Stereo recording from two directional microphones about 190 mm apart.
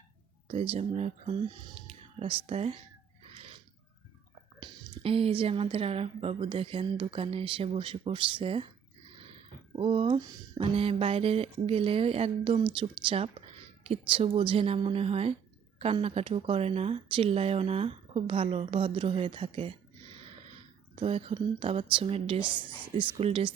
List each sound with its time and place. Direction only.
0.4 s speech: 30° right (ahead or behind)
3.3 s a sound: 30° right (ahead or behind)
4.6 s a woman's voice: 30° right (ahead or behind)
9.7 s a woman's voice: 30° right (ahead or behind)
20.9 s a woman's voice: 30° right (ahead or behind)